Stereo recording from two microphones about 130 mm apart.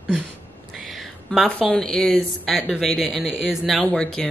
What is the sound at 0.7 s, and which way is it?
A woman's voice, centre (ahead or behind).